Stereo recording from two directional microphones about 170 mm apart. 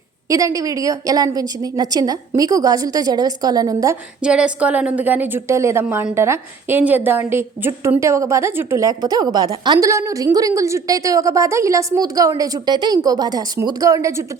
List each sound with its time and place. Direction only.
0.3 s a woman's voice: 20° right (ahead or behind)
4.2 s a woman's voice: 5° right (ahead or behind)